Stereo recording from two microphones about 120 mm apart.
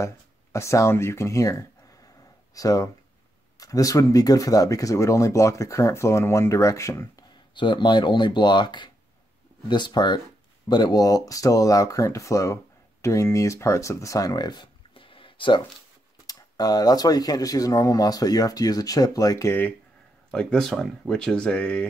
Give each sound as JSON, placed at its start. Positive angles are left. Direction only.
{"t": 0.0, "sound": "speech", "side_deg": 25}
{"t": 7.5, "sound": "speech", "side_deg": 40}
{"t": 16.3, "sound": "speech", "side_deg": 35}
{"t": 20.2, "sound": "speech", "side_deg": 5}